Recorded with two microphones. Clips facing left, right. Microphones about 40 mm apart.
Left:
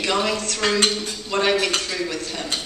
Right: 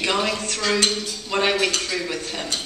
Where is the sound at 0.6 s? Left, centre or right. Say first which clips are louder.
Left 1 dB; centre.